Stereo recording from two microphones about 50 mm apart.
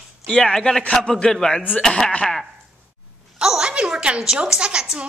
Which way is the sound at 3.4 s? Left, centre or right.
Centre.